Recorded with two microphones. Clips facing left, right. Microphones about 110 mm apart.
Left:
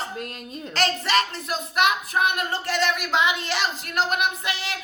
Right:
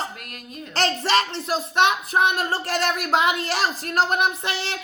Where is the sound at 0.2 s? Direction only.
30° left (ahead or behind).